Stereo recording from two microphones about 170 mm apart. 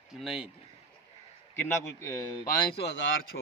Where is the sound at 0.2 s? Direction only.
Centre (ahead or behind).